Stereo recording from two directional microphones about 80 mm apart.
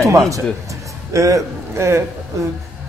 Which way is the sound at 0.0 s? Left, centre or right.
Right.